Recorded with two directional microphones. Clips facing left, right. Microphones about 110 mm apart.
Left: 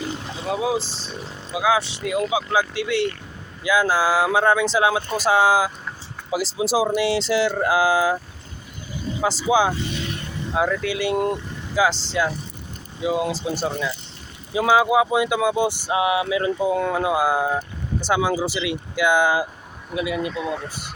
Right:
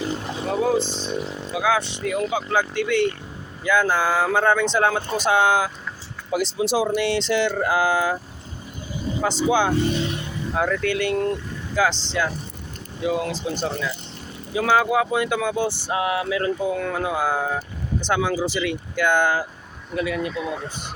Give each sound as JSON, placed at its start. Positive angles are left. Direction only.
{"t": 0.4, "sound": "speech", "side_deg": 5}
{"t": 0.8, "sound": "speech", "side_deg": 35}
{"t": 1.5, "sound": "speech", "side_deg": 5}
{"t": 9.5, "sound": "speech", "side_deg": 10}